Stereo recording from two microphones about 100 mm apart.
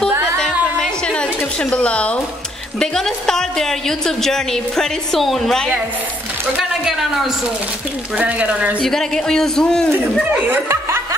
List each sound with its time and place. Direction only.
0.4 s a sound: 10° left (ahead or behind)
2.8 s a woman's voice: 5° left (ahead or behind)
6.8 s a woman's voice: 5° right (ahead or behind)
8.2 s speech: 15° right (ahead or behind)
8.8 s a woman's voice: 5° left (ahead or behind)
10.3 s speech: 20° right (ahead or behind)